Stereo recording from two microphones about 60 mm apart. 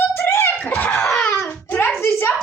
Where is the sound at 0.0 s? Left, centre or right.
Left.